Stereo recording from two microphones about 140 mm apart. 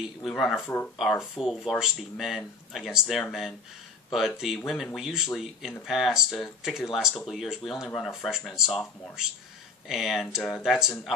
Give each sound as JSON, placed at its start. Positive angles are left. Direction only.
{"t": 0.0, "sound": "speech", "side_deg": 0}
{"t": 4.6, "sound": "speech", "side_deg": 0}
{"t": 9.8, "sound": "speech", "side_deg": 0}